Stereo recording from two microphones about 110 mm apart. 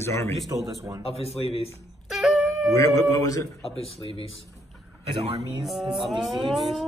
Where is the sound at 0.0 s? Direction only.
25° left (ahead or behind).